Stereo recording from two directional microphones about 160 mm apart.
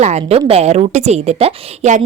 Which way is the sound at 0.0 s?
40° right (ahead or behind).